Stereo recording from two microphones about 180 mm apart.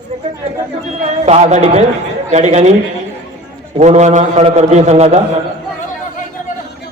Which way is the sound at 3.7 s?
40° right (ahead or behind).